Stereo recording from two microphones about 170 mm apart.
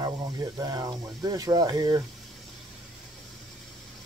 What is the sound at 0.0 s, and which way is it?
Speech, 25° right (ahead or behind).